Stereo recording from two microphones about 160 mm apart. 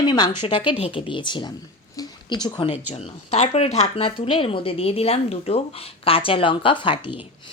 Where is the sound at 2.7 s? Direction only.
40° left (ahead or behind).